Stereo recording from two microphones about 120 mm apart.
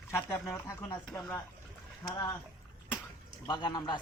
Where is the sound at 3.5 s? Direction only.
35° left (ahead or behind).